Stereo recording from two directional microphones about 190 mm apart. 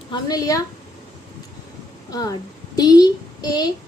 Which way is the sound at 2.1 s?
20° left (ahead or behind).